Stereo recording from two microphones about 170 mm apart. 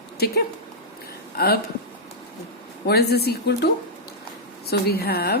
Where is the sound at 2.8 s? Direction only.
70° left (ahead or behind).